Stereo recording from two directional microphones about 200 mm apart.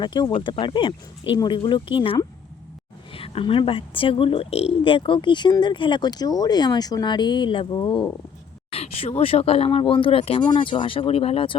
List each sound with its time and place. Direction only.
0.0 s speech: 20° left (ahead or behind)